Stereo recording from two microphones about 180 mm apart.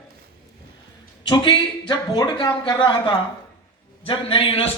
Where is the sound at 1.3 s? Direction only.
25° left (ahead or behind).